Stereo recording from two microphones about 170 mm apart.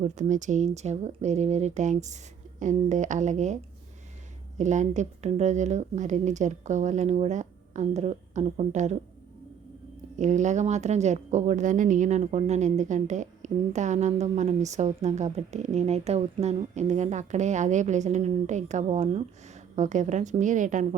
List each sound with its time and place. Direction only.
0.0 s speech: 45° right (ahead or behind)
10.2 s speech: 45° right (ahead or behind)